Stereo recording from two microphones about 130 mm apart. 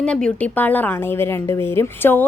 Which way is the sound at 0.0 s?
10° left (ahead or behind).